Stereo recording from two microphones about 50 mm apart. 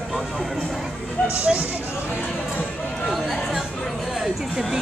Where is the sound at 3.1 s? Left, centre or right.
Centre.